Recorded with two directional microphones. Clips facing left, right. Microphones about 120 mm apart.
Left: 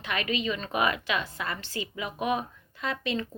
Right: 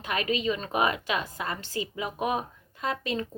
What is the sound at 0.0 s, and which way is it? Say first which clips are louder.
A woman's voice: right 2 dB; 40° right (ahead or behind).